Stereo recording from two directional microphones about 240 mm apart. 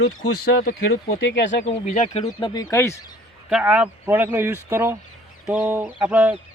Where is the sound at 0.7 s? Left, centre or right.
Left.